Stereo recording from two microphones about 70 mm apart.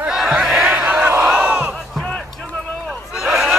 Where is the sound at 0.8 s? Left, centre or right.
Centre.